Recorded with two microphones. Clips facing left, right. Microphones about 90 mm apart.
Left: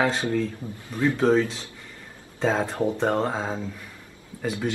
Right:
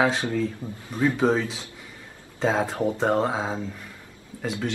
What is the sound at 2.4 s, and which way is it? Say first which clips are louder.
Speech: even; 5° right (ahead or behind).